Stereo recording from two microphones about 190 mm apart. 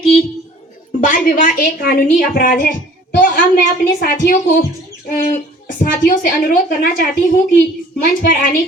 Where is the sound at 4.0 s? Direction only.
45° left (ahead or behind).